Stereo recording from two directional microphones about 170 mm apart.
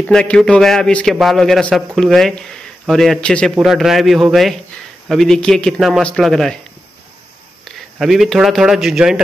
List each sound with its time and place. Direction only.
0.0 s a man's voice: 5° left (ahead or behind)
7.6 s a man's voice: centre (ahead or behind)